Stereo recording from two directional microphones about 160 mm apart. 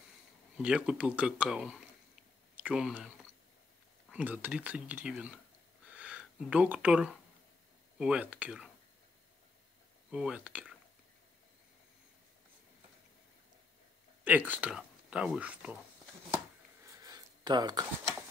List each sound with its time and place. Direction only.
0.6 s speech: 5° right (ahead or behind)
4.1 s speech: 10° right (ahead or behind)
5.9 s a sound: 10° right (ahead or behind)
8.0 s speech: 5° right (ahead or behind)
10.1 s speech: 5° right (ahead or behind)
14.2 s speech: 10° right (ahead or behind)
16.8 s a sound: 20° right (ahead or behind)